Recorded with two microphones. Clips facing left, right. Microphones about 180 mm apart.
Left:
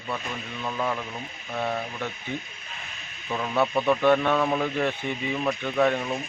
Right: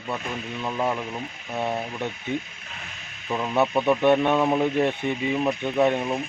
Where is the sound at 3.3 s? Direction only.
20° right (ahead or behind).